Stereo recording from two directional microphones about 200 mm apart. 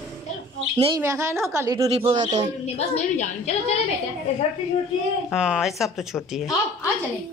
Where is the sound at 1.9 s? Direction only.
30° right (ahead or behind).